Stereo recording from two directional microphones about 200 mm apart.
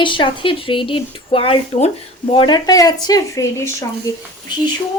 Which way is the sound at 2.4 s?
20° left (ahead or behind).